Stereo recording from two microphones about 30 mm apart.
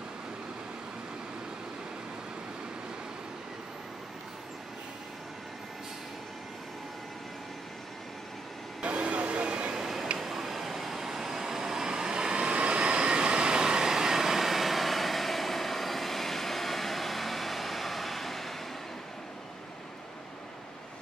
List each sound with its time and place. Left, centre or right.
8.8 s vehicle: right
9.8 s tick-tock: centre
10.1 s vehicle: centre